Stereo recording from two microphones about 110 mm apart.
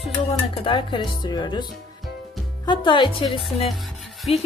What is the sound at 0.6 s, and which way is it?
Speech, 50° left (ahead or behind).